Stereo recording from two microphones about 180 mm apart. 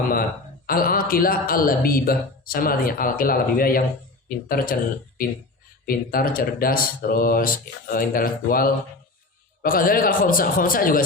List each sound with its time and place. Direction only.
0.7 s speech: 55° left (ahead or behind)